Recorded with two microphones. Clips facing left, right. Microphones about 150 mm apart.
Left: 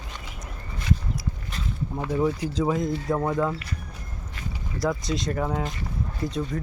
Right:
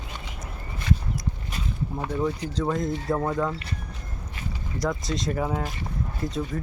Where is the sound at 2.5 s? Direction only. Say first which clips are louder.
Left 2 dB; 5° left (ahead or behind).